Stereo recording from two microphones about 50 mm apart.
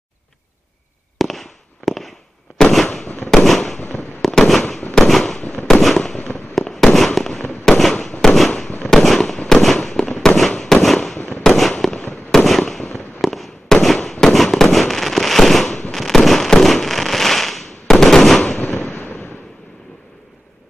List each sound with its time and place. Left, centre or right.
1.1 s fireworks: centre
5.8 s fireworks: centre
6.1 s fireworks: left
6.6 s fireworks: centre
11.1 s fireworks: left
11.4 s fireworks: centre
18.9 s fireworks: left